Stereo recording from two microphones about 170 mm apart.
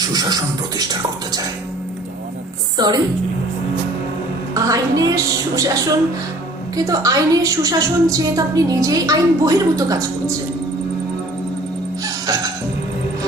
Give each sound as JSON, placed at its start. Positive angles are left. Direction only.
{"t": 0.1, "sound": "a woman's voice", "side_deg": -25}
{"t": 2.7, "sound": "a woman's voice", "side_deg": -25}
{"t": 4.5, "sound": "a woman's voice", "side_deg": -20}
{"t": 6.7, "sound": "a woman's voice", "side_deg": -20}
{"t": 12.0, "sound": "music", "side_deg": -20}